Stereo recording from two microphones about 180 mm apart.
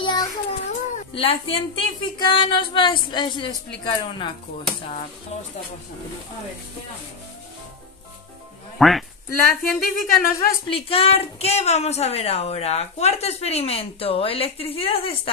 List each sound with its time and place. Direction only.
0.0 s child singing: 20° left (ahead or behind)
0.7 s a sound: 30° left (ahead or behind)
2.1 s a woman's voice: 25° left (ahead or behind)
8.7 s speech: centre (ahead or behind)
9.3 s speech: 50° left (ahead or behind)
10.7 s a woman's voice: 30° left (ahead or behind)